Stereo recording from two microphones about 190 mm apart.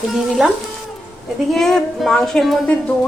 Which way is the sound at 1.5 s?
Centre (ahead or behind).